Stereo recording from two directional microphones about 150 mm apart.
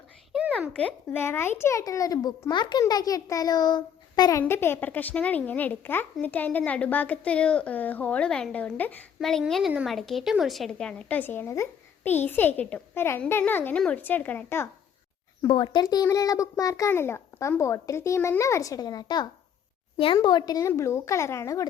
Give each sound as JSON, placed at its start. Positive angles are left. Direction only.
{"t": 0.8, "sound": "a child's voice", "side_deg": 10}
{"t": 15.4, "sound": "a child's voice", "side_deg": 30}